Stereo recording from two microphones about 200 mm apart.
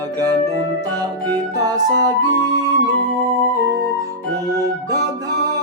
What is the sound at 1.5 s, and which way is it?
Music, 20° right (ahead or behind).